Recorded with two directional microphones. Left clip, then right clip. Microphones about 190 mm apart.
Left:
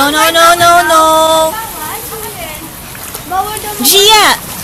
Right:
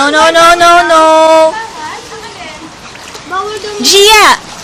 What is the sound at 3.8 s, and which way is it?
Speech, 30° right (ahead or behind).